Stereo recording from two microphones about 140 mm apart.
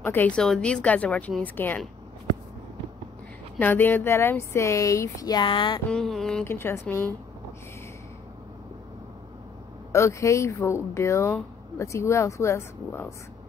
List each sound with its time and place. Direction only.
0.0 s a woman's voice: 15° left (ahead or behind)
3.5 s speech: 15° left (ahead or behind); by 5.8 s 35° left (ahead or behind)
5.9 s a sound: 5° left (ahead or behind)
6.4 s a woman's voice: 15° left (ahead or behind)
9.9 s speech: 20° left (ahead or behind)